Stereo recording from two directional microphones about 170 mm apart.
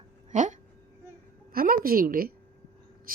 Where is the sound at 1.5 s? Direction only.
60° right (ahead or behind).